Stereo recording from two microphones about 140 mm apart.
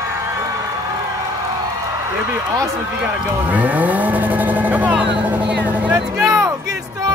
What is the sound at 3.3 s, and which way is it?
Vehicle, 10° right (ahead or behind).